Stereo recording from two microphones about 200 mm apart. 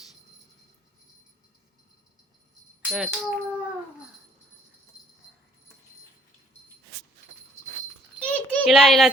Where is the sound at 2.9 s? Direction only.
5° right (ahead or behind).